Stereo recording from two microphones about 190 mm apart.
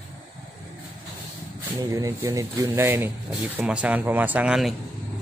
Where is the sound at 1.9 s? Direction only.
20° right (ahead or behind); by 4.8 s 5° right (ahead or behind).